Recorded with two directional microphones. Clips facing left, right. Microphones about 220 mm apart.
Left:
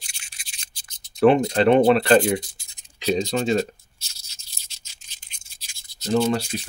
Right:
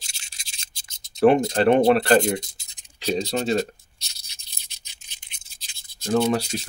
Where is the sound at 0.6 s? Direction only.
25° right (ahead or behind).